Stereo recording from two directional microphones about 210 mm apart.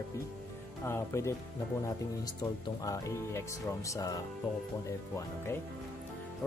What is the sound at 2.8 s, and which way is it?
Speech, 15° left (ahead or behind).